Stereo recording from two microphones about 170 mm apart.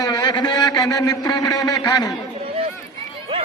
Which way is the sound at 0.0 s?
25° left (ahead or behind).